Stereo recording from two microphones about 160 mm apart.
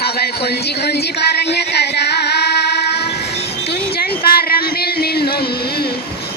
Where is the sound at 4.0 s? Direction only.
70° left (ahead or behind).